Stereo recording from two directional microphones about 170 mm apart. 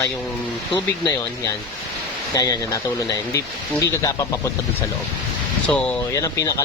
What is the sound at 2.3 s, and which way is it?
Speech, 20° left (ahead or behind).